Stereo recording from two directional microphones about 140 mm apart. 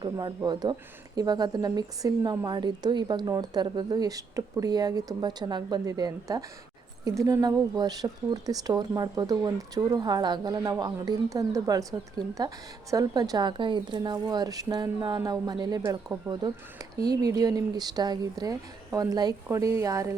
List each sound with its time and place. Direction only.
0.0 s speech: 30° right (ahead or behind)